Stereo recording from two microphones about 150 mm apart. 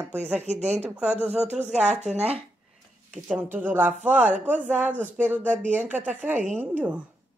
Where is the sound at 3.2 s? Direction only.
10° right (ahead or behind).